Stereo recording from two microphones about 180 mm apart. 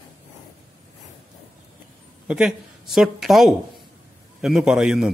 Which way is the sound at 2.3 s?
5° right (ahead or behind).